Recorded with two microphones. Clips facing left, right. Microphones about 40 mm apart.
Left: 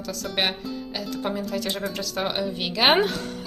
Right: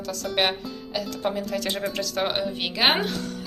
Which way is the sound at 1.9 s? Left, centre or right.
Right.